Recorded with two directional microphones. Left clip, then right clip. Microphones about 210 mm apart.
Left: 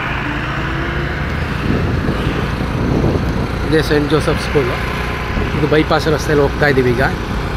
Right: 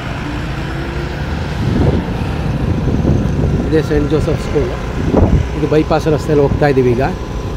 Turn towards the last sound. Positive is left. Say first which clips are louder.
# right 1 dB
turn(degrees=-25)  # may be behind; listen again after turning